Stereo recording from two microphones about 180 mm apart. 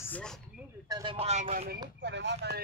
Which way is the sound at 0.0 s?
5° left (ahead or behind).